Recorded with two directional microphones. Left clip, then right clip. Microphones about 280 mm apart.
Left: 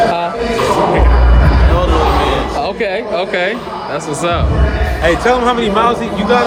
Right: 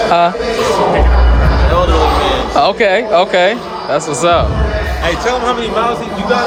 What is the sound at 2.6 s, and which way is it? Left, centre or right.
Speech, right.